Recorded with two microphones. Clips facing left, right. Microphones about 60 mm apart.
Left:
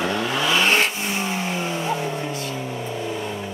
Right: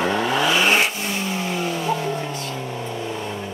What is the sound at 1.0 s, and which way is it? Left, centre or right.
Vehicle, left.